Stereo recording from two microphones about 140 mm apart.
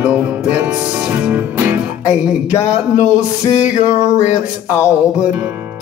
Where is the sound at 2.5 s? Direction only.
20° left (ahead or behind).